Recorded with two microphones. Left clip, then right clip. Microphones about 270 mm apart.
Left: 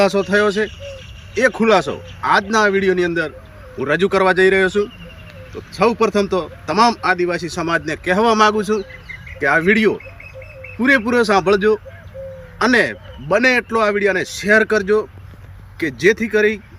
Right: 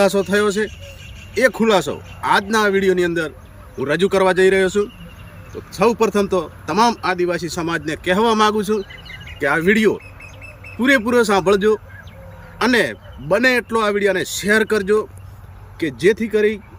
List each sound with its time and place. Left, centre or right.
0.0 s speech: centre